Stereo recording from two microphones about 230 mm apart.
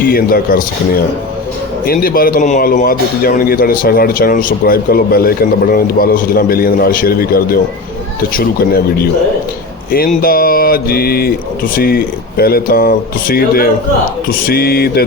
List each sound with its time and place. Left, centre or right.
0.0 s a man's voice: left
10.2 s a man's voice: left